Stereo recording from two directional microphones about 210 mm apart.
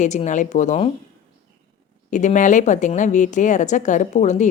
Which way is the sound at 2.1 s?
35° left (ahead or behind).